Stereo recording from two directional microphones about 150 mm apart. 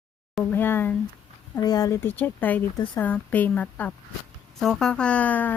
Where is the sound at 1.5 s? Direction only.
25° left (ahead or behind).